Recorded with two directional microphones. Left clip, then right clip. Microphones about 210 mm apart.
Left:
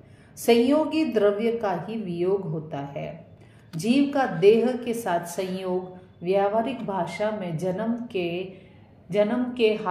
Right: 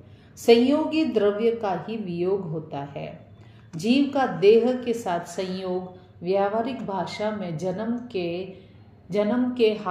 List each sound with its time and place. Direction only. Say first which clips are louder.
0.5 s a woman's voice: right 2 dB; 20° left (ahead or behind)